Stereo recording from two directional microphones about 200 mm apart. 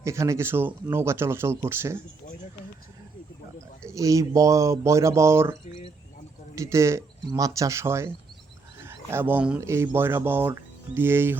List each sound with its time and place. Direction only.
0.0 s speech: 15° right (ahead or behind)
3.9 s speech: 15° right (ahead or behind)
5.6 s a sound: 35° left (ahead or behind)
6.6 s speech: 15° right (ahead or behind)